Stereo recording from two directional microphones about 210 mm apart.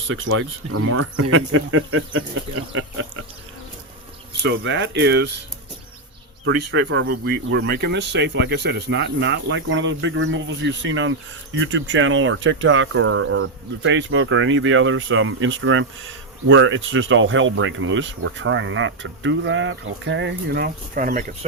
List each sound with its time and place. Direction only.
0.1 s speech: 75° right (ahead or behind)
4.4 s speech: 60° right (ahead or behind)
6.4 s speech: 60° right (ahead or behind); by 21.3 s 40° right (ahead or behind)